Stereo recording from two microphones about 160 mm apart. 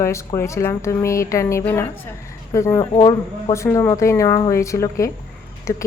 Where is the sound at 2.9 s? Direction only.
30° left (ahead or behind).